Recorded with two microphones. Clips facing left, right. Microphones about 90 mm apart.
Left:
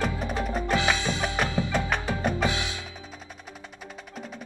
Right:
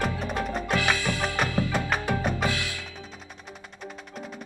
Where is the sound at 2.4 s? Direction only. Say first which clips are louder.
Left 1 dB; 20° left (ahead or behind).